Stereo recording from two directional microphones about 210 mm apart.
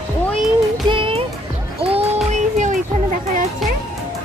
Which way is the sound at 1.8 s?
30° right (ahead or behind).